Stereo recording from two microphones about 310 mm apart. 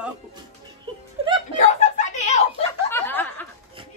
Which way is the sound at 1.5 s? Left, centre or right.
Left.